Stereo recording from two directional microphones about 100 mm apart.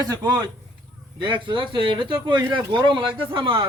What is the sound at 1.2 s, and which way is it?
Speech, 50° right (ahead or behind).